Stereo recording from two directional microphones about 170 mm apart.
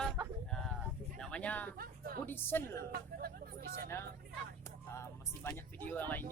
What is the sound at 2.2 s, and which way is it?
Speech, 15° left (ahead or behind).